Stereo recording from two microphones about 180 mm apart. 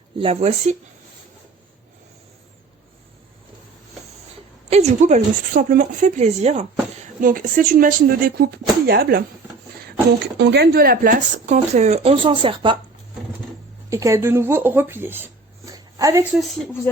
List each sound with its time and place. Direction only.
0.2 s speech: 30° right (ahead or behind)
4.7 s speech: 40° right (ahead or behind)
7.2 s speech: 50° right (ahead or behind)
10.3 s speech: 70° right (ahead or behind); by 12.7 s 30° right (ahead or behind)
13.9 s speech: 15° right (ahead or behind)
16.3 s a woman's voice: centre (ahead or behind)